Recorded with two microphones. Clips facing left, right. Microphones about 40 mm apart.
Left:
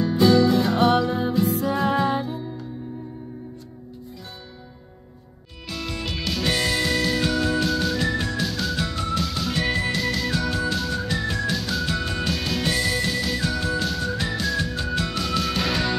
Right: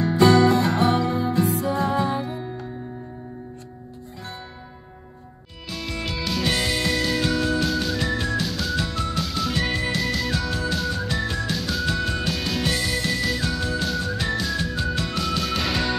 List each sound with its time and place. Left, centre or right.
0.0 s music: right
0.7 s music: left
1.3 s music: right
1.7 s music: left
5.7 s music: centre